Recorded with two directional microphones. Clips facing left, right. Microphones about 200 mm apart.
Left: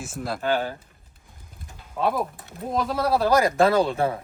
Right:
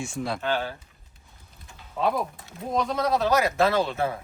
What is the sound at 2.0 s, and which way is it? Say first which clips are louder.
A man's voice: left 1 dB; centre (ahead or behind).